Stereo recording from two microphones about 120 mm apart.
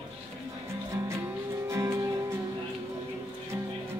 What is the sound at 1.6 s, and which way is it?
Music, 25° right (ahead or behind).